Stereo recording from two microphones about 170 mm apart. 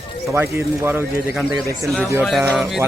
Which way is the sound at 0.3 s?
15° right (ahead or behind).